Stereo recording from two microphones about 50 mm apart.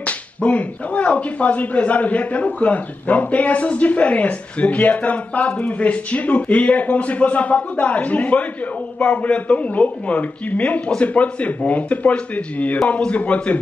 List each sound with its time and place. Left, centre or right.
0.0 s speech: left